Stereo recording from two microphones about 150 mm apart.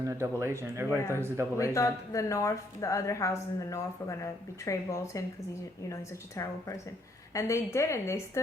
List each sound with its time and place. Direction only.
0.2 s speech: 20° right (ahead or behind)
0.9 s speech: 20° left (ahead or behind)
1.1 s speech: 15° right (ahead or behind)
1.5 s a woman's voice: 20° left (ahead or behind)